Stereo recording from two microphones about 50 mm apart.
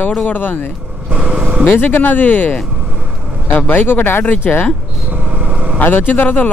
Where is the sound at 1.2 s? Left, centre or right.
Centre.